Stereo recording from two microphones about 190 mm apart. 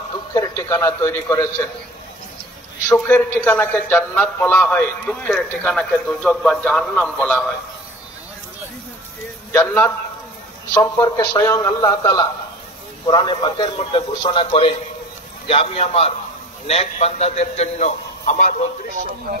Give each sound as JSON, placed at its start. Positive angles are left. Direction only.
{"t": 0.3, "sound": "a man's voice", "side_deg": 15}
{"t": 2.9, "sound": "a man's voice", "side_deg": 10}
{"t": 9.5, "sound": "a man's voice", "side_deg": 10}